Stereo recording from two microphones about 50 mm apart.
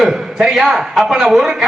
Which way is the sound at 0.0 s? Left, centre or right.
Centre.